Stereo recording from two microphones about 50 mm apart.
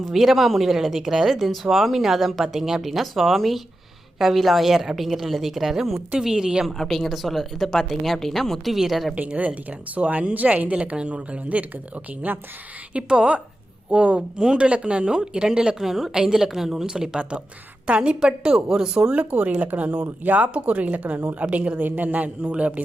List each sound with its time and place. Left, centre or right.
0.0 s speech: centre
6.7 s speech: centre
9.1 s speech: right
12.9 s speech: centre
19.1 s speech: right